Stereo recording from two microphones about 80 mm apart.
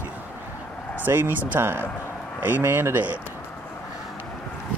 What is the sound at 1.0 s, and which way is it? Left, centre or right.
Speech, right.